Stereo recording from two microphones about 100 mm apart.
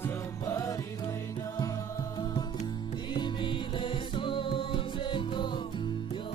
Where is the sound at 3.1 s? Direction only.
55° left (ahead or behind).